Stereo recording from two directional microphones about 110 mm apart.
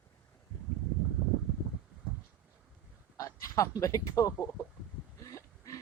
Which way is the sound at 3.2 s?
30° left (ahead or behind).